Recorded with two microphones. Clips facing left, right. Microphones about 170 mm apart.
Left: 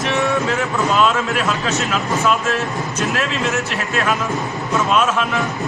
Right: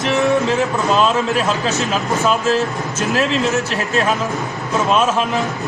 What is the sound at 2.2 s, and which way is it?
Speech, 35° right (ahead or behind).